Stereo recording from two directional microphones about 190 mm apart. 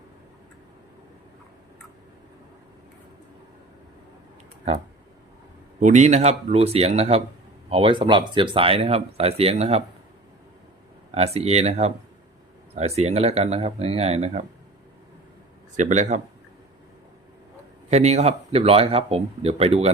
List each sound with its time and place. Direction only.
5.8 s speech: 40° right (ahead or behind)
11.1 s speech: 35° right (ahead or behind)
15.7 s speech: 40° right (ahead or behind)
17.9 s speech: 35° right (ahead or behind)